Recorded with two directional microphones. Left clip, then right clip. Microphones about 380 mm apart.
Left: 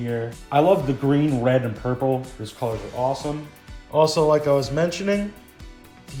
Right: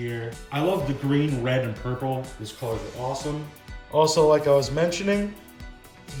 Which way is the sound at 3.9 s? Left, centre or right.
Centre.